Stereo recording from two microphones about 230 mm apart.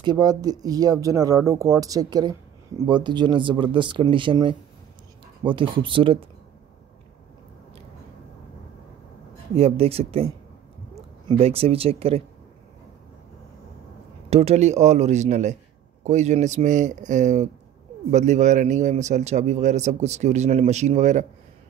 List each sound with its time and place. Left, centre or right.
0.0 s speech: centre
9.6 s speech: right
14.3 s a man's voice: right